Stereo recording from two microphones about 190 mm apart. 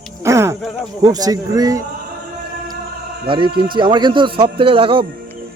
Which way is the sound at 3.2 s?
25° right (ahead or behind).